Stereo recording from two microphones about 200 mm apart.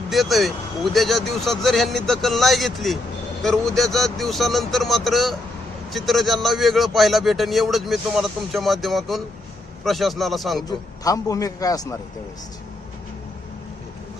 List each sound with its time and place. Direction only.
0.1 s a man's voice: centre (ahead or behind)
10.7 s a man's voice: 15° left (ahead or behind)